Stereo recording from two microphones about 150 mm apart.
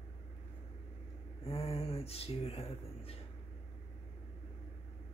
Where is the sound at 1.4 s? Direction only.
40° left (ahead or behind).